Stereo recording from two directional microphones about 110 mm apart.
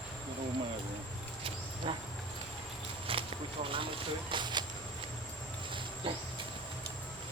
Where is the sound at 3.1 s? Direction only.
55° right (ahead or behind).